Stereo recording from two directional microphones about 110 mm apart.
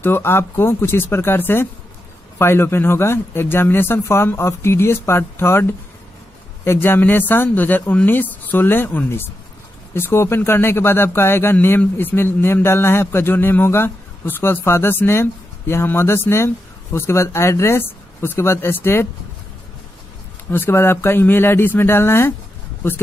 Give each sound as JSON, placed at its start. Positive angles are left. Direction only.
{"t": 0.0, "sound": "a man's voice", "side_deg": 20}
{"t": 20.5, "sound": "a man's voice", "side_deg": 20}